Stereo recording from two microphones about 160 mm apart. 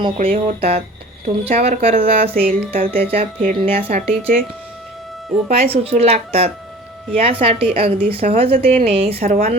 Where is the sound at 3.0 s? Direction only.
35° right (ahead or behind).